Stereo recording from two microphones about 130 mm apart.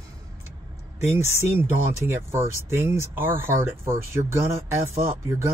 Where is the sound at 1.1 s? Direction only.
20° right (ahead or behind).